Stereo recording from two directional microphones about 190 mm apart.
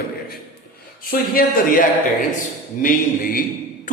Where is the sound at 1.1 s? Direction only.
50° left (ahead or behind).